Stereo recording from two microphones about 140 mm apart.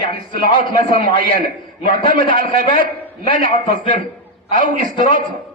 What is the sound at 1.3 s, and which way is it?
A man's voice, 90° right.